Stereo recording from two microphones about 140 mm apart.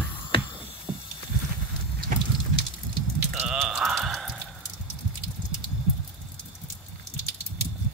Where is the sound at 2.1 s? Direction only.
80° right.